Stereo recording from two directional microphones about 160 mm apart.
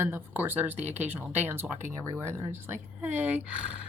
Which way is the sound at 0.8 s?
45° right (ahead or behind).